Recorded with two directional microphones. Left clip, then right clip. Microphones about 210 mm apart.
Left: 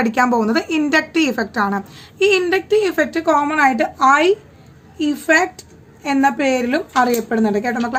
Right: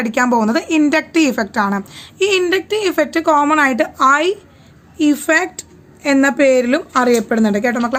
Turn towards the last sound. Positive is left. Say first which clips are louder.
# right 2 dB
turn(degrees=-35)  # may be behind; listen again after turning